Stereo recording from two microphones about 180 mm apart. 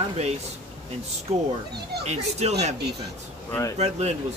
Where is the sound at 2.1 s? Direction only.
35° right (ahead or behind).